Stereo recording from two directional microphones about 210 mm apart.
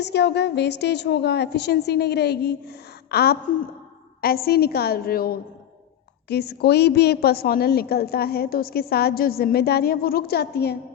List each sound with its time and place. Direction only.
0.0 s a woman's voice: 55° left (ahead or behind)